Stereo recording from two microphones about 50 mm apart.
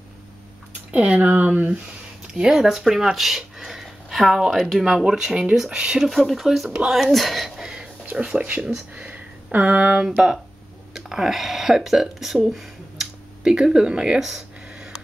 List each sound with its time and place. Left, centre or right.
0.9 s speech: right
2.4 s speech: centre
6.0 s speech: centre
7.7 s a sound: right
8.6 s speech: centre
9.0 s a sound: right
9.7 s speech: right
10.9 s speech: centre